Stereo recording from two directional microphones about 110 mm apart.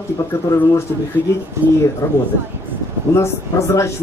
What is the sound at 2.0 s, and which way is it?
A woman's voice, 30° left (ahead or behind).